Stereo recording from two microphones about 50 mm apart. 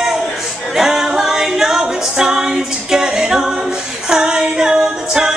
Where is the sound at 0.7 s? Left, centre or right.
Centre.